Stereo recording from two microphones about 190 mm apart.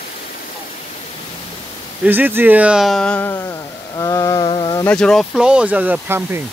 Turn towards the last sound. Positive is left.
turn(degrees=-10)  # may be behind; listen again after turning